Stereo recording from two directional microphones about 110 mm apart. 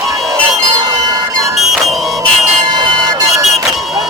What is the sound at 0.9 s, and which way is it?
Train, 35° right (ahead or behind).